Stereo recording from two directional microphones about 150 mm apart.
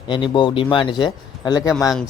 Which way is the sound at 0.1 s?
30° left (ahead or behind).